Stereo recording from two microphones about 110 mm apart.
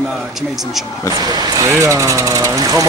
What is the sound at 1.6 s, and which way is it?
Speech, 25° right (ahead or behind).